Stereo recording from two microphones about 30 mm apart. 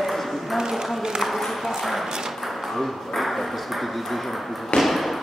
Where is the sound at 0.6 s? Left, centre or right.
Centre.